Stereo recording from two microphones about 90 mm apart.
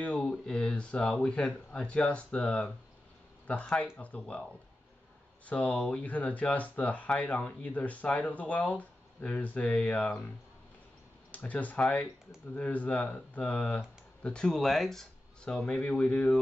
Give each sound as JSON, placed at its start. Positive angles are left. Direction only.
{"t": 0.0, "sound": "a sound", "side_deg": 10}
{"t": 0.3, "sound": "speech", "side_deg": 10}
{"t": 5.5, "sound": "speech", "side_deg": 15}
{"t": 11.3, "sound": "speech", "side_deg": 15}